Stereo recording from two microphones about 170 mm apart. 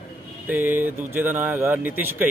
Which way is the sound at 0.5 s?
10° right (ahead or behind).